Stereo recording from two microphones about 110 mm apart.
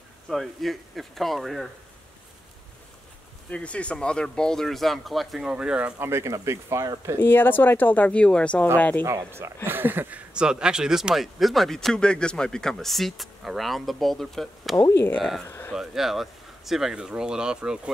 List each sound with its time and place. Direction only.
0.3 s speech: centre (ahead or behind)
3.4 s speech: 10° left (ahead or behind); by 5.9 s 10° right (ahead or behind)
5.9 s speech: 25° right (ahead or behind)
7.2 s speech: 20° left (ahead or behind)
9.0 s speech: 25° right (ahead or behind); by 14.8 s centre (ahead or behind)
14.8 s speech: 20° left (ahead or behind)
15.1 s speech: centre (ahead or behind)
15.4 s a sound: 25° left (ahead or behind)
15.7 s speech: 5° right (ahead or behind)